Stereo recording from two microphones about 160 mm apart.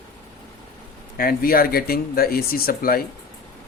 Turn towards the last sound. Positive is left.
turn(degrees=65)  # may be behind; listen again after turning